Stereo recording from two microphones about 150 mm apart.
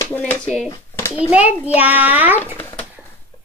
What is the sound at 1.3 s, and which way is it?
A woman's voice, 10° right (ahead or behind).